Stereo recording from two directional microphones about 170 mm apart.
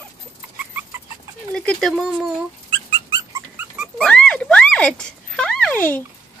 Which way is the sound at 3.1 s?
20° right (ahead or behind).